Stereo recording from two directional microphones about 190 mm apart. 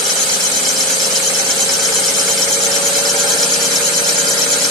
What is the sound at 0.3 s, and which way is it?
Engine, 20° left (ahead or behind).